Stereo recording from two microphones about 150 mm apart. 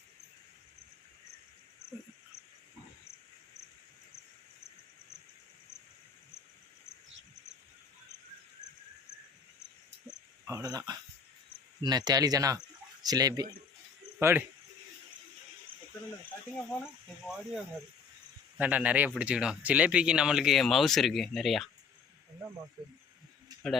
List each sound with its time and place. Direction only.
10.4 s speech: 20° right (ahead or behind)
16.8 s speech: 5° right (ahead or behind)